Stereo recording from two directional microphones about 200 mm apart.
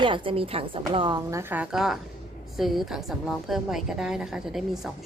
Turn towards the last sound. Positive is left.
turn(degrees=0)  # may be behind; listen again after turning